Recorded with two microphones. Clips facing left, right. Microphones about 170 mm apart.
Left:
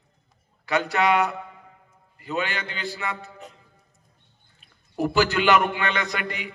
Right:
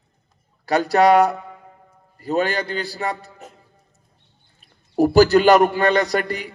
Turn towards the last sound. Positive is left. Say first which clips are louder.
# right 8 dB
turn(degrees=-40)  # may be behind; listen again after turning